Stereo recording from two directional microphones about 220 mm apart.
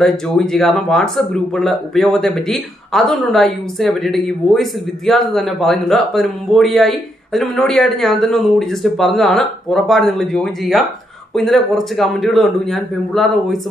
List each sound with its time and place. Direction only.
0.0 s speech: centre (ahead or behind)